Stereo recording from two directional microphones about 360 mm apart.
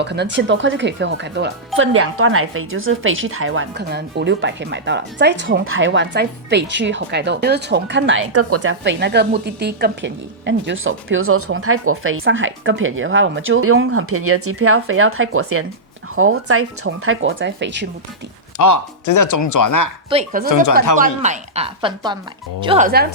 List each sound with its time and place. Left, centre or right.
0.0 s speech: right
18.5 s speech: left
20.1 s speech: centre
20.5 s speech: left
20.9 s a woman's voice: centre